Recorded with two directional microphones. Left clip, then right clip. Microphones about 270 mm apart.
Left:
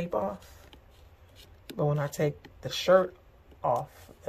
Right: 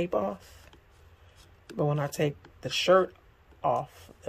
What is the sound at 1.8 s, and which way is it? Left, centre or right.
Speech, centre.